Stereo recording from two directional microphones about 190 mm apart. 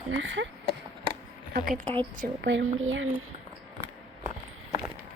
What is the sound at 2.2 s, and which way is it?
Speech, 65° right (ahead or behind).